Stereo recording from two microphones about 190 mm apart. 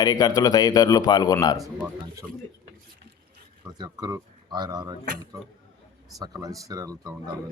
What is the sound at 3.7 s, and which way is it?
Speech, 20° right (ahead or behind).